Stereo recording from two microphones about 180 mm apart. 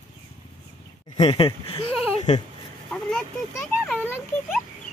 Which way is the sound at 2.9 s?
5° left (ahead or behind).